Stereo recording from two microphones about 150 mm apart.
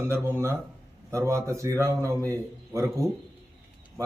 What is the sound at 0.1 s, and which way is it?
A man's voice, 15° right (ahead or behind).